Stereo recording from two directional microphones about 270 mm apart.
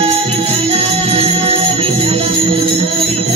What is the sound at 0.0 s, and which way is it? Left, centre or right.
Music, right.